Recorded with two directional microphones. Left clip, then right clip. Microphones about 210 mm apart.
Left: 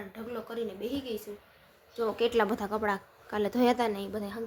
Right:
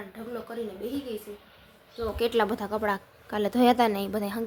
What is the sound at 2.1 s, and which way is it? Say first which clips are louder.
A woman's voice: right 3 dB; centre (ahead or behind).